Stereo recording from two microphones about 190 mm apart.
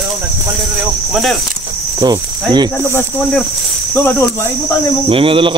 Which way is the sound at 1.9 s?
20° right (ahead or behind).